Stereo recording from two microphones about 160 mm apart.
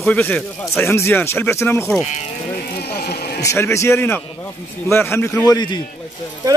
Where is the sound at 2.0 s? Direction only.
45° left (ahead or behind).